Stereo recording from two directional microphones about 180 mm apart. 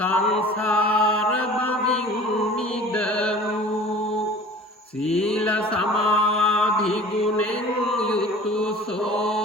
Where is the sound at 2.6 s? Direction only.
5° left (ahead or behind).